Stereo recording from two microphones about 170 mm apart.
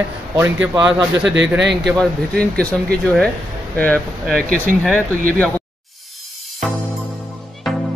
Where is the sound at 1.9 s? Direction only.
5° left (ahead or behind).